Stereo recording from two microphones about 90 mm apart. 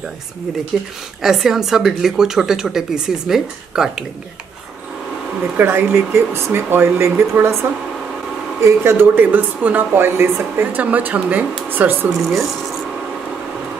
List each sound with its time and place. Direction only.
0.7 s speech: centre (ahead or behind)
5.6 s speech: 25° right (ahead or behind)
8.5 s speech: 30° right (ahead or behind)
12.1 s speech: centre (ahead or behind)